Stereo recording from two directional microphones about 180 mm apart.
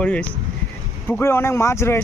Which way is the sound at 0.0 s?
5° left (ahead or behind).